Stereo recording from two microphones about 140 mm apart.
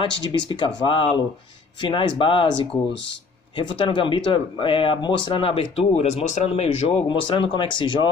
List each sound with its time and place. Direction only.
0.0 s speech: 35° left (ahead or behind)
7.1 s speech: 35° left (ahead or behind)